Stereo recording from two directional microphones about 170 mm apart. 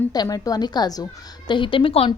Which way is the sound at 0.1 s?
20° left (ahead or behind).